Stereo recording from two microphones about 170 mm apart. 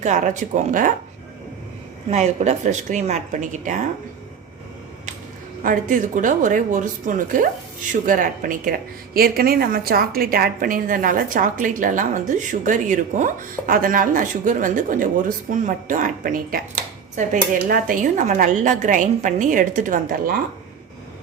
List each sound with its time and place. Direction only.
0.0 s speech: 45° right (ahead or behind)
2.0 s speech: 40° right (ahead or behind)
5.6 s speech: 50° right (ahead or behind)